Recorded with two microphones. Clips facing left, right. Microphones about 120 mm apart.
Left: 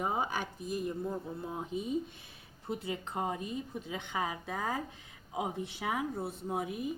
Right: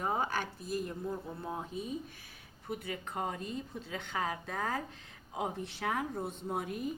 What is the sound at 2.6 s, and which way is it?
A woman's voice, 25° left (ahead or behind).